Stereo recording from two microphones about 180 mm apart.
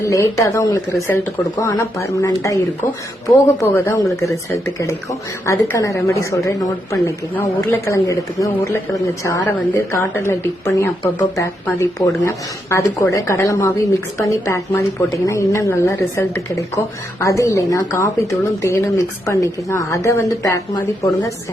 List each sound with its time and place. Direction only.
0.0 s speech: 15° left (ahead or behind)